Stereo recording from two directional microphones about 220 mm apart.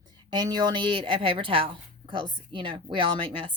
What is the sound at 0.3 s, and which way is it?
Speech, 20° right (ahead or behind).